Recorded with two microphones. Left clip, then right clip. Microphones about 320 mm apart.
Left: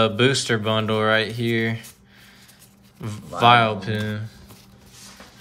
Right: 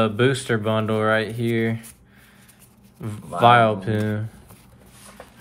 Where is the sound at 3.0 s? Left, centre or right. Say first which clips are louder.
Right 1 dB; centre.